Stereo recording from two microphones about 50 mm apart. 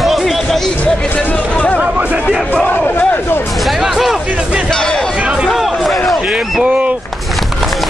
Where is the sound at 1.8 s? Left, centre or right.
Right.